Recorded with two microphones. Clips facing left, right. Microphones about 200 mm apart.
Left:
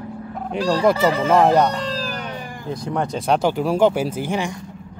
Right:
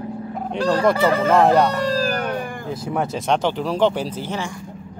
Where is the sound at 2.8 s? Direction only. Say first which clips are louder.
Left 1 dB; 5° right (ahead or behind); by 4.5 s 15° left (ahead or behind).